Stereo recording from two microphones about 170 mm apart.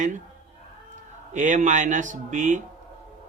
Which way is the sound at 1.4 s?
45° right (ahead or behind).